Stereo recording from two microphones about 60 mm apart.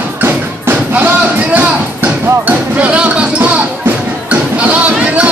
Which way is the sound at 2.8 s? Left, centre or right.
Right.